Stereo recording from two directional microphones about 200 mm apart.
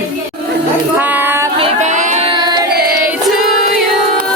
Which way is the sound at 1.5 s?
35° right (ahead or behind).